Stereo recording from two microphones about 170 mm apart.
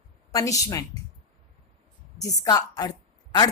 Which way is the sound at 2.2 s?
25° left (ahead or behind).